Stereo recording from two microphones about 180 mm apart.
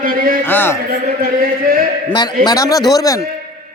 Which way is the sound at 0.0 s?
50° right (ahead or behind).